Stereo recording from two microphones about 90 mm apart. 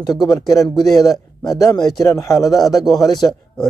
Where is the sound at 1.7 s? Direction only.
50° left (ahead or behind).